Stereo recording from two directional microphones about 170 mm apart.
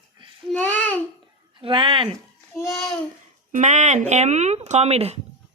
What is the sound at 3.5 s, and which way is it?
Speech, 45° right (ahead or behind).